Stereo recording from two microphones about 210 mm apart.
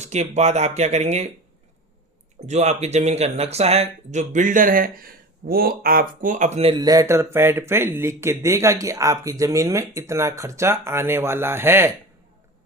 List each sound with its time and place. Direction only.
0.0 s speech: 30° right (ahead or behind)
2.5 s speech: 30° right (ahead or behind); by 11.9 s 10° right (ahead or behind)